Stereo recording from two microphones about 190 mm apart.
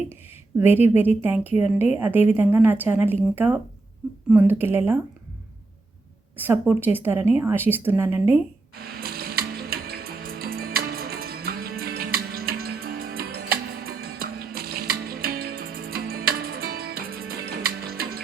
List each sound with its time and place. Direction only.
0.6 s a woman's voice: 10° right (ahead or behind)
6.3 s a woman's voice: 10° right (ahead or behind)
9.0 s music: 55° right (ahead or behind)